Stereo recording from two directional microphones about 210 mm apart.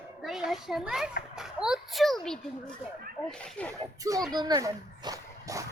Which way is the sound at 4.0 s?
15° right (ahead or behind).